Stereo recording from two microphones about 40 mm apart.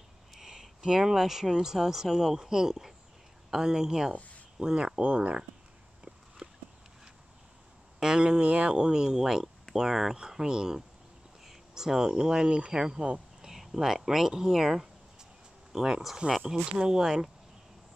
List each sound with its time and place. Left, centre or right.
0.3 s speech: centre; by 5.4 s right
6.4 s a sound: right
8.0 s speech: centre
13.4 s speech: centre